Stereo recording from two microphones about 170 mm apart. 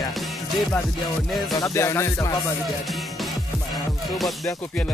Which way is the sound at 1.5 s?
20° left (ahead or behind).